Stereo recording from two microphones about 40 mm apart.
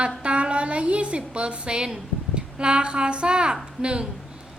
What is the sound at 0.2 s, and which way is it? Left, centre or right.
A woman's voice, right.